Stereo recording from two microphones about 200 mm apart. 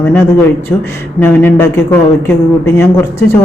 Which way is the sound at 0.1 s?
10° left (ahead or behind).